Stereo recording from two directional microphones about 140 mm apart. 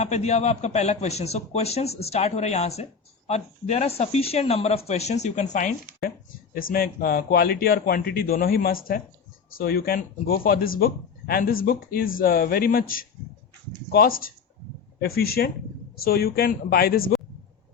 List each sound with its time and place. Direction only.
0.0 s a man's voice: 55° left (ahead or behind); by 6.1 s 70° left (ahead or behind)
6.5 s a man's voice: 90° left